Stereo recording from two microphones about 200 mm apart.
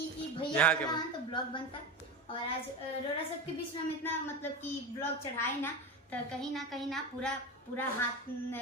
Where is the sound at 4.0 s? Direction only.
10° left (ahead or behind).